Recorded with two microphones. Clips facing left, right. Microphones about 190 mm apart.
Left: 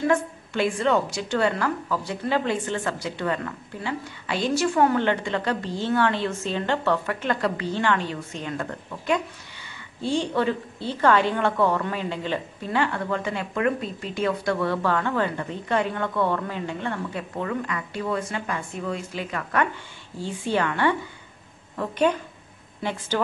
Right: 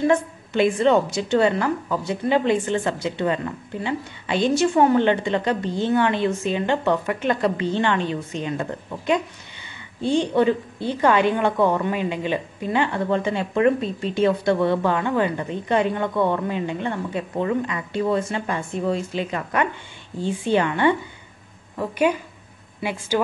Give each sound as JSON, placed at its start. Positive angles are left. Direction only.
{"t": 0.0, "sound": "a woman's voice", "side_deg": -20}